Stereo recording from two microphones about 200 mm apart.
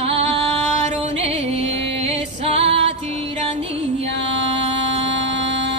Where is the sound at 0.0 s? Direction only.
30° right (ahead or behind).